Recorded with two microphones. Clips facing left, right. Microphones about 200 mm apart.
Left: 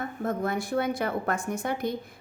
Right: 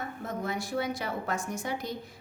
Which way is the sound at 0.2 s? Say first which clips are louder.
Left 6 dB; 55° left (ahead or behind).